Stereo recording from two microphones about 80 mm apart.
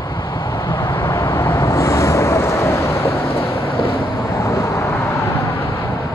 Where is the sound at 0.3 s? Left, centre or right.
Left.